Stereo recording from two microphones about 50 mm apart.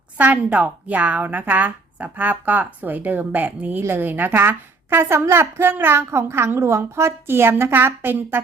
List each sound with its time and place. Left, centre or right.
0.2 s a woman's voice: right
6.1 s a woman's voice: right